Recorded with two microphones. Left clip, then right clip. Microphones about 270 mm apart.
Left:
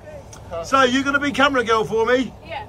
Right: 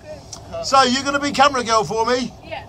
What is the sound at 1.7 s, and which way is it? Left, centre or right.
Speech, centre.